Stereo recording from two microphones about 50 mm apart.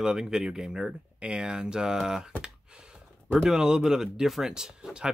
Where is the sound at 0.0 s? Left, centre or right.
Centre.